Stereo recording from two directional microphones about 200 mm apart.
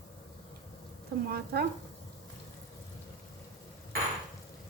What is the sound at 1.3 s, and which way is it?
Speech, 50° right (ahead or behind).